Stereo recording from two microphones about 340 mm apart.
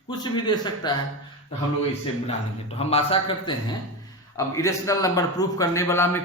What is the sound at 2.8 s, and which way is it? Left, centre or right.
A man's voice, centre.